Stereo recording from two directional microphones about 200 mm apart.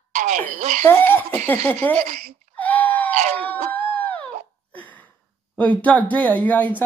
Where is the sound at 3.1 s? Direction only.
35° right (ahead or behind).